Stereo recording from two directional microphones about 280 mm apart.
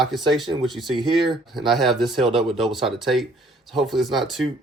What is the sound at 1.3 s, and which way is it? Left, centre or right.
Speech, centre.